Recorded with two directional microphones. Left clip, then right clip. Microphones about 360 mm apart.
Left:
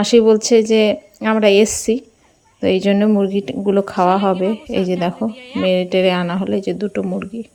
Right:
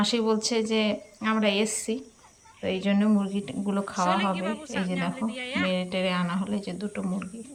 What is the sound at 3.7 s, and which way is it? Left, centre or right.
A woman's voice, centre.